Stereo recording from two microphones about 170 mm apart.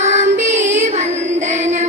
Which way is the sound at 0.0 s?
45° right (ahead or behind).